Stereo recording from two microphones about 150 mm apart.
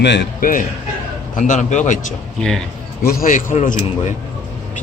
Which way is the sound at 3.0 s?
75° left (ahead or behind).